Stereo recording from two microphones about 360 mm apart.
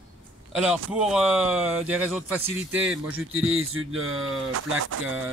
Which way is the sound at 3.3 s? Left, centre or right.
Right.